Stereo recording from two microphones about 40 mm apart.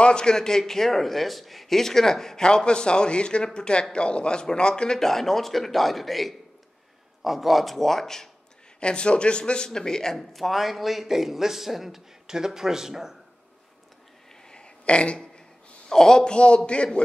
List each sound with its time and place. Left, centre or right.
0.0 s a man's voice: left
8.7 s a man's voice: left
10.1 s speech: centre
14.5 s a sound: left
15.9 s a man's voice: centre